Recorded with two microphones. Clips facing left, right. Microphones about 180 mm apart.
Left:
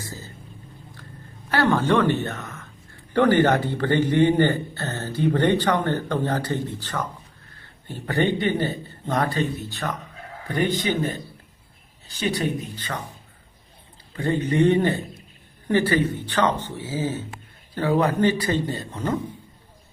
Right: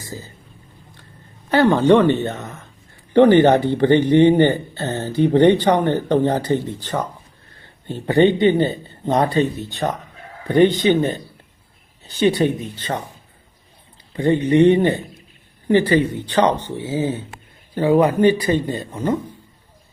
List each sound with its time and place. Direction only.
0.1 s boat: 15° right (ahead or behind)
1.5 s speech: 20° right (ahead or behind)
14.2 s speech: 20° right (ahead or behind)